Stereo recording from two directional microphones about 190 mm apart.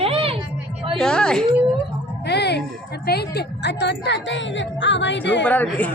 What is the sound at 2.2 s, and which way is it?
A woman's voice, 60° left (ahead or behind).